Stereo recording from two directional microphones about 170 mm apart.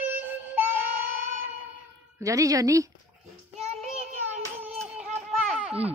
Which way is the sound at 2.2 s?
20° right (ahead or behind).